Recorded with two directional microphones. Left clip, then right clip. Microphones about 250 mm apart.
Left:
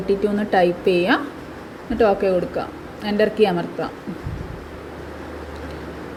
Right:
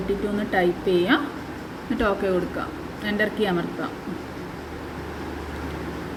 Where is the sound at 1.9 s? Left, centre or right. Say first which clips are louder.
Left 6 dB; centre.